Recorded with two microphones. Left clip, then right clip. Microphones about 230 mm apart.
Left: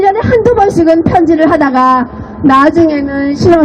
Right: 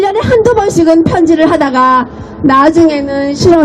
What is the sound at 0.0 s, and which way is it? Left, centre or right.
A woman's voice, right.